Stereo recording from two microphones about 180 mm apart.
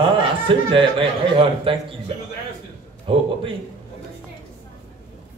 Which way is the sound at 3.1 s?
30° right (ahead or behind).